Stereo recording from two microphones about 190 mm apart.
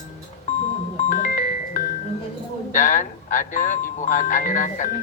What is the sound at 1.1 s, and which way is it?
Music, 45° left (ahead or behind).